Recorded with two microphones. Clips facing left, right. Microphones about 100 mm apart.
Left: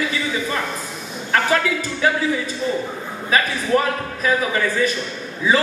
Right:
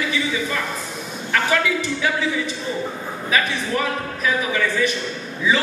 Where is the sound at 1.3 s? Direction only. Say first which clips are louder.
Left 1 dB; 40° left (ahead or behind).